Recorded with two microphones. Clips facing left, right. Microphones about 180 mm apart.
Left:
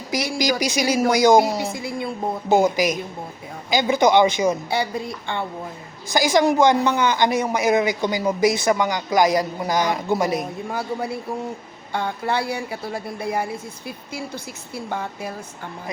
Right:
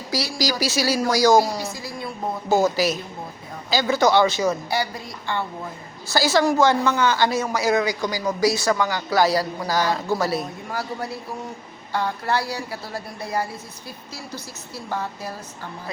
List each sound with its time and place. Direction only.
0.1 s a woman's voice: 20° left (ahead or behind)